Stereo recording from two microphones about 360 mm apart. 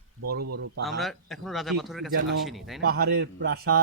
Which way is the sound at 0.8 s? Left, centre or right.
Centre.